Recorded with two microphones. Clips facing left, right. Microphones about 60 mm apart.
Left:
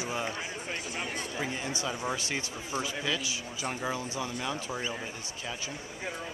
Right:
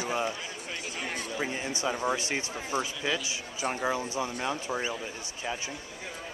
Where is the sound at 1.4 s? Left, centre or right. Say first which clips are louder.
Right 3 dB; right.